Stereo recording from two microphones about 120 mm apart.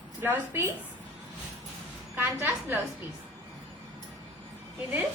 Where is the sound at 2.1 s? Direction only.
20° right (ahead or behind).